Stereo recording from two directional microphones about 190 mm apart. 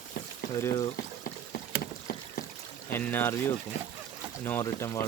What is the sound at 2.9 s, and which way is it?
Speech, 10° left (ahead or behind).